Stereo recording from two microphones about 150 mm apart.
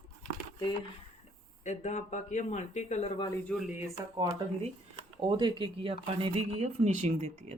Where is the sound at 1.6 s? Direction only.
50° left (ahead or behind).